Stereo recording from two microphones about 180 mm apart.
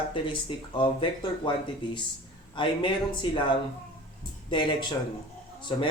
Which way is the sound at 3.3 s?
25° left (ahead or behind).